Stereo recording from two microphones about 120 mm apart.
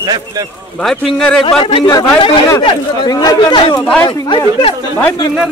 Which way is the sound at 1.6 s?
45° left (ahead or behind).